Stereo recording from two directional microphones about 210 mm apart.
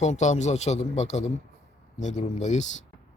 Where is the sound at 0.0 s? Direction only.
35° left (ahead or behind).